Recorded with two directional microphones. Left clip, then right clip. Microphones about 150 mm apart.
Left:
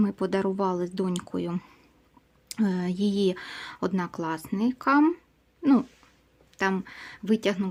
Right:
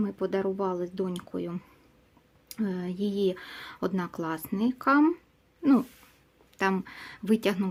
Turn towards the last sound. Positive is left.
turn(degrees=0)  # may be behind; listen again after turning